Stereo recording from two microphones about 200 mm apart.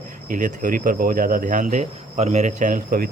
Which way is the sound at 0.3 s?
40° right (ahead or behind).